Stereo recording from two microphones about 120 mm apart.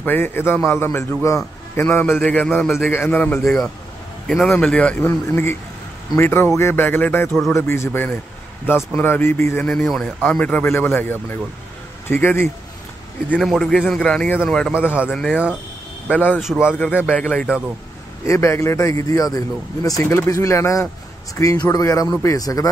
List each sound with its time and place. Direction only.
0.0 s a man's voice: 15° left (ahead or behind)
3.4 s a man's voice: 5° left (ahead or behind)
9.7 s a man's voice: 5° left (ahead or behind)
10.4 s a man's voice: 15° left (ahead or behind)
13.4 s a man's voice: centre (ahead or behind)
14.7 s a man's voice: 10° right (ahead or behind)
15.0 s a man's voice: 5° left (ahead or behind)
16.3 s a man's voice: 5° right (ahead or behind)
16.7 s a man's voice: 15° left (ahead or behind)
18.2 s speech: 25° left (ahead or behind)